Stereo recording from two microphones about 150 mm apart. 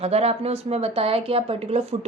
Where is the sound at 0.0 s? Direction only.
45° right (ahead or behind).